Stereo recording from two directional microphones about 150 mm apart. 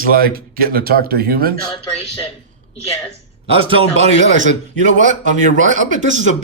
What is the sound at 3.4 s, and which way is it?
Speech, 40° right (ahead or behind).